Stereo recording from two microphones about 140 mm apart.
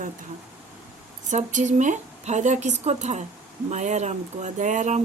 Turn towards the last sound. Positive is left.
turn(degrees=-60)  # may be behind; listen again after turning